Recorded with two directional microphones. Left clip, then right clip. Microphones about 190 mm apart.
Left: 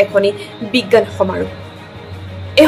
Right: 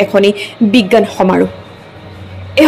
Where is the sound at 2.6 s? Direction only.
30° right (ahead or behind).